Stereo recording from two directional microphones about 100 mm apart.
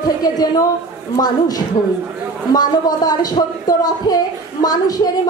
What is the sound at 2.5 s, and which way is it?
A woman's voice, 40° left (ahead or behind).